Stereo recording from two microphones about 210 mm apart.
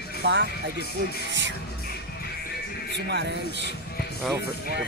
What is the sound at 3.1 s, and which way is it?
Speech, 55° right (ahead or behind).